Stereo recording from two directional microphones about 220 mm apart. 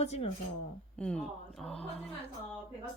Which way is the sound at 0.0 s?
30° left (ahead or behind).